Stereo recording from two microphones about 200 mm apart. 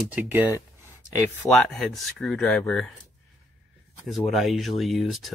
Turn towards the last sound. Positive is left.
turn(degrees=0)  # may be behind; listen again after turning